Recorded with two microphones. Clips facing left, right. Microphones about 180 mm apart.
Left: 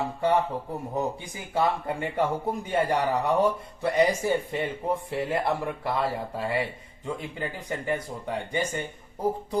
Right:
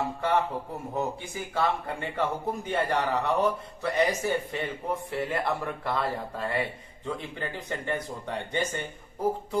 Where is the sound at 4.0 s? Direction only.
15° left (ahead or behind).